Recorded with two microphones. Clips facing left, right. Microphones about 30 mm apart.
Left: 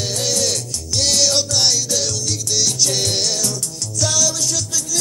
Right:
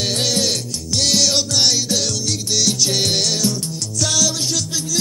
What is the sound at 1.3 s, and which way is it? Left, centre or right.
Music, centre.